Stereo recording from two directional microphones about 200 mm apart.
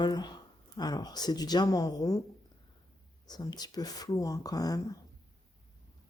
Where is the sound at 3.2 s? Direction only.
20° left (ahead or behind).